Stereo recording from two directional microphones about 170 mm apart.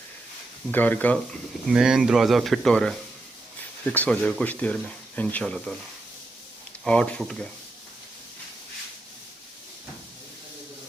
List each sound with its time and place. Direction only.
0.7 s speech: 10° left (ahead or behind)
1.7 s speech: 5° right (ahead or behind)
6.8 s speech: 5° left (ahead or behind)